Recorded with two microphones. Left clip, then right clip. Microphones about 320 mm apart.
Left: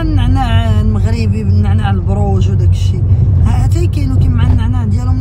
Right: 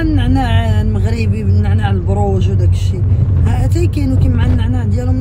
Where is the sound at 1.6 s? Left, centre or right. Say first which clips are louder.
Left 1 dB; centre.